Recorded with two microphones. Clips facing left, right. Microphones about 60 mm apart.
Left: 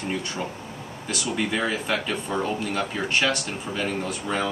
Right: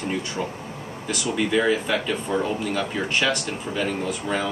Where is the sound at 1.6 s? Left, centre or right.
Centre.